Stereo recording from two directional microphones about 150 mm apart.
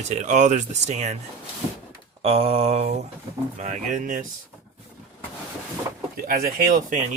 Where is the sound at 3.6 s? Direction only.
55° right (ahead or behind).